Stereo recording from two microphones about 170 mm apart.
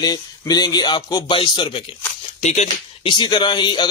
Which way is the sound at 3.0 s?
25° left (ahead or behind).